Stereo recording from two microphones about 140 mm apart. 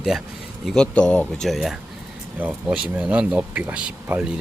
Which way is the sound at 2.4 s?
10° right (ahead or behind).